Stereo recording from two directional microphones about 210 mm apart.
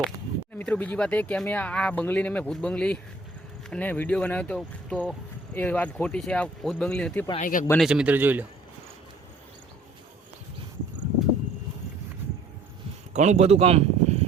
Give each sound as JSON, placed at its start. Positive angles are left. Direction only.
{"t": 0.6, "sound": "speech", "side_deg": 5}
{"t": 7.3, "sound": "speech", "side_deg": 40}
{"t": 7.7, "sound": "speech", "side_deg": 0}
{"t": 13.1, "sound": "speech", "side_deg": -35}